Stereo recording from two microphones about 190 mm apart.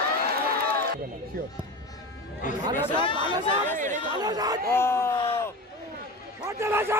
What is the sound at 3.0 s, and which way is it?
Speech, 25° left (ahead or behind).